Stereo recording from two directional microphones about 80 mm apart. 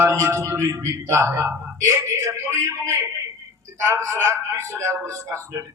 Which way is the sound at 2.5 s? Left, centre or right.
Right.